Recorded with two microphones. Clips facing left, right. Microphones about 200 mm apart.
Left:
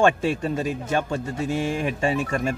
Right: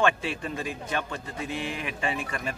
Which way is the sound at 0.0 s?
45° left (ahead or behind).